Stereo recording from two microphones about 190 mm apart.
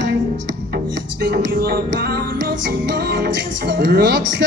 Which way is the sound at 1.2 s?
55° right (ahead or behind).